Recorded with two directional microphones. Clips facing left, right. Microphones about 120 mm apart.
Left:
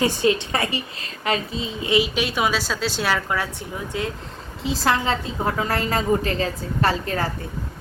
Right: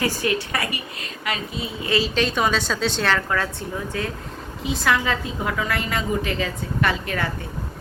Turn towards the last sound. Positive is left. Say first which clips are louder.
# left 2 dB
turn(degrees=35)  # may be behind; listen again after turning